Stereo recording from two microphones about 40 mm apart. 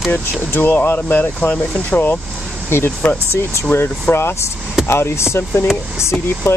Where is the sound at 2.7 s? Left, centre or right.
Left.